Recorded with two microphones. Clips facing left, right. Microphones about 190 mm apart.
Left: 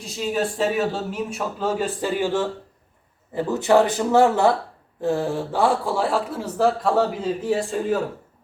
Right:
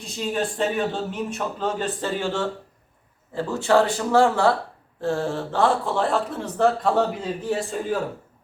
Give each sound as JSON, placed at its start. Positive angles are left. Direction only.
{"t": 0.2, "sound": "speech", "side_deg": 5}